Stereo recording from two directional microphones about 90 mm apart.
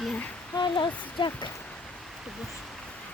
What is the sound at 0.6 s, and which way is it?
Speech, 60° left (ahead or behind).